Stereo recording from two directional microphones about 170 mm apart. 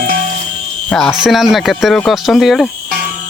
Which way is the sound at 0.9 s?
5° left (ahead or behind).